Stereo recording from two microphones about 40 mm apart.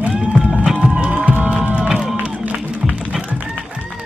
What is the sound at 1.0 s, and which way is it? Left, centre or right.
Music, right.